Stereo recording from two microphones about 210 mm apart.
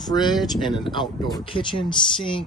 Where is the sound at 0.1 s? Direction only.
20° left (ahead or behind).